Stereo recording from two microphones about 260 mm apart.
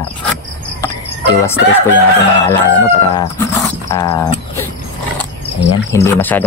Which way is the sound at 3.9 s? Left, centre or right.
Centre.